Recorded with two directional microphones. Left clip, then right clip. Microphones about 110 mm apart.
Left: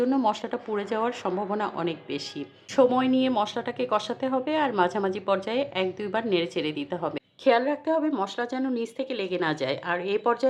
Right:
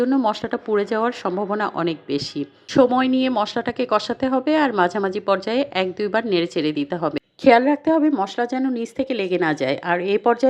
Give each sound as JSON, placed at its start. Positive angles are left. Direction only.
{"t": 0.3, "sound": "a woman's voice", "side_deg": -40}